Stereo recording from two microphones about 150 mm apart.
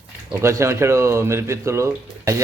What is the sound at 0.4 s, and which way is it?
Speech, 20° right (ahead or behind).